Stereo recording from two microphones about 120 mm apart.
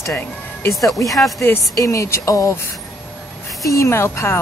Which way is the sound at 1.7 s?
25° left (ahead or behind).